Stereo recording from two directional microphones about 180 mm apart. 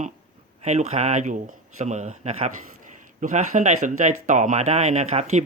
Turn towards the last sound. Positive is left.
turn(degrees=-40)  # may be behind; listen again after turning